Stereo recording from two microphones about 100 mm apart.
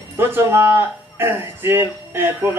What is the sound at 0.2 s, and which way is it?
Speech, 20° right (ahead or behind).